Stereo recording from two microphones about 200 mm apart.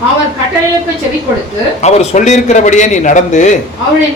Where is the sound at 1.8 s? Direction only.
35° left (ahead or behind).